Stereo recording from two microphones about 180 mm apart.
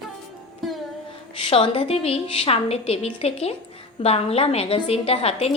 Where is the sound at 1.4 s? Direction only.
30° left (ahead or behind).